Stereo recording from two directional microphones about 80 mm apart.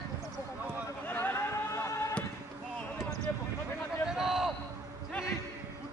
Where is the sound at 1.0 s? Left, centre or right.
Left.